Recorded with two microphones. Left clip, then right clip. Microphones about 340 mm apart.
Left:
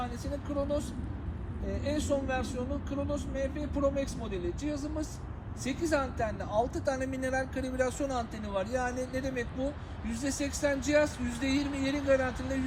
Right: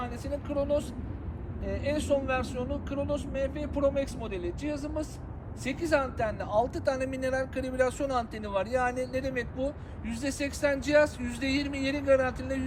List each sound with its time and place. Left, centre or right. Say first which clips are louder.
0.5 s speech: right 4 dB; centre